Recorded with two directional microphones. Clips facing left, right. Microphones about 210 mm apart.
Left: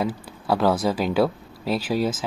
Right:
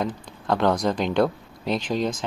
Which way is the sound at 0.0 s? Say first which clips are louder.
Left 2 dB; 5° left (ahead or behind).